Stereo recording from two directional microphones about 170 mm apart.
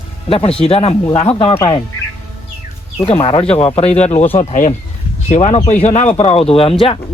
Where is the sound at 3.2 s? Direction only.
35° left (ahead or behind).